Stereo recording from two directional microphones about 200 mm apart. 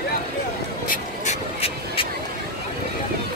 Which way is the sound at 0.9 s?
30° left (ahead or behind).